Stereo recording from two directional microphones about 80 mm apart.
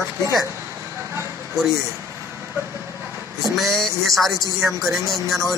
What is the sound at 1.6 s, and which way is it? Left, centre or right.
Speech, right.